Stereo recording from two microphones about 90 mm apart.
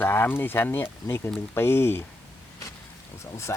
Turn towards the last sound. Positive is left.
turn(degrees=30)  # may be behind; listen again after turning